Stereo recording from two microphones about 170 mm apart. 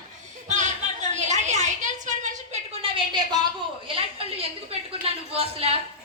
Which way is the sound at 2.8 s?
25° right (ahead or behind).